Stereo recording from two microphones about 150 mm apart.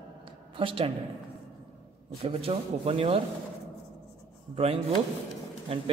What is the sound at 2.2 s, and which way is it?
Speech, 40° right (ahead or behind).